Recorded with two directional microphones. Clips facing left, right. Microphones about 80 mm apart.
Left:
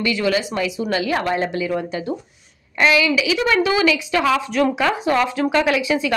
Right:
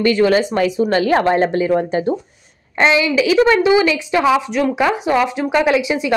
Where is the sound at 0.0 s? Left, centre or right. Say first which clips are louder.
Right 6 dB; right.